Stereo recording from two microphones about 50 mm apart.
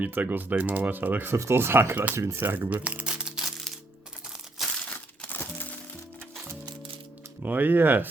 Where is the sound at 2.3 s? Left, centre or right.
Right.